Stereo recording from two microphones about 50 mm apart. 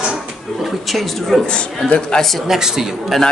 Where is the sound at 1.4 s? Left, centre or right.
Left.